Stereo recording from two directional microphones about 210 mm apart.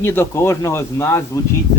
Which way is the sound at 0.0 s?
10° left (ahead or behind).